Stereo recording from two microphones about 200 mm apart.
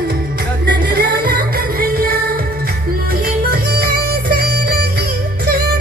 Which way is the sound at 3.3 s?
50° right (ahead or behind).